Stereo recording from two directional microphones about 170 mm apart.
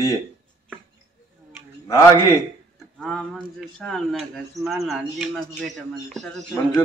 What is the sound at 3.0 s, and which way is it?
Speech, 5° left (ahead or behind).